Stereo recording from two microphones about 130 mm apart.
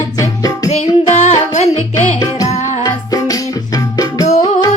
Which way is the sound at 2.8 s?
30° left (ahead or behind).